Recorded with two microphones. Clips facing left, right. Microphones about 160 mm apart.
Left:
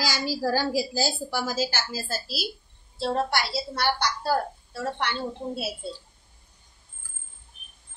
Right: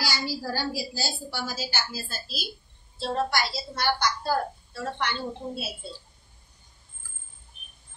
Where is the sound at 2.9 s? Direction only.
65° left (ahead or behind).